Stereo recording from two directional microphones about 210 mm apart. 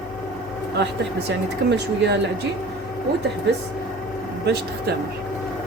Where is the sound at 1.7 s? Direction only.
55° right (ahead or behind).